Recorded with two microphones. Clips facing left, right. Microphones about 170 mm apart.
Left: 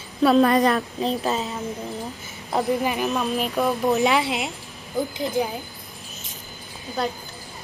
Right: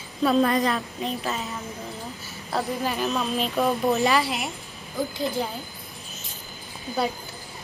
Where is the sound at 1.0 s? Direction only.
35° left (ahead or behind).